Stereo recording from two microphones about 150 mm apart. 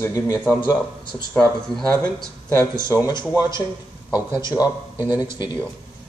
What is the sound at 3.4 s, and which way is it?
Speech, 15° right (ahead or behind).